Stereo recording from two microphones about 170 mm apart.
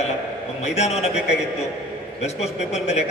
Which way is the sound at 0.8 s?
40° left (ahead or behind).